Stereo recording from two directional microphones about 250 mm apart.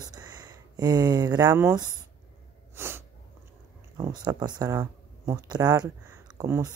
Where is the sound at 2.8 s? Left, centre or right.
Centre.